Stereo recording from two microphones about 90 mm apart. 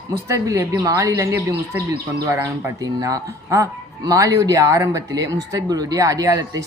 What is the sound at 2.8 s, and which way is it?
Speech, 40° right (ahead or behind).